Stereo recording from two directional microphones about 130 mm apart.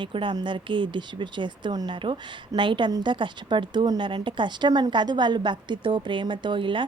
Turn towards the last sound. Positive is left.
turn(degrees=-40)  # may be behind; listen again after turning